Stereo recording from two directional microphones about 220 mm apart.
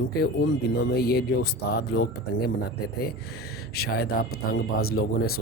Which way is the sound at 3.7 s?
45° left (ahead or behind).